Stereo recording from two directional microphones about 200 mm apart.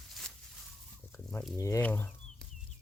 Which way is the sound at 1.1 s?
10° left (ahead or behind).